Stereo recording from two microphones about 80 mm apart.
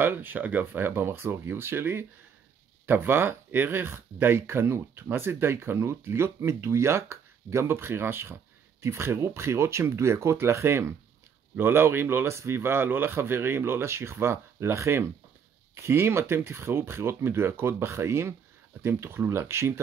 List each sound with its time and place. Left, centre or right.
0.0 s speech: right